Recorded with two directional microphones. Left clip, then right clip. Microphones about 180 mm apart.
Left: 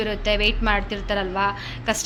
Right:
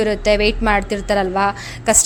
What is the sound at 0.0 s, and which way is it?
A woman's voice, 40° right (ahead or behind).